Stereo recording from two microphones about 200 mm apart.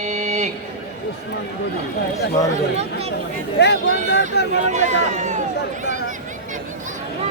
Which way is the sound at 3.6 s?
60° left (ahead or behind).